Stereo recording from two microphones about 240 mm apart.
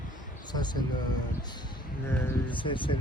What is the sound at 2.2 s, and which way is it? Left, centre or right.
Speech, left.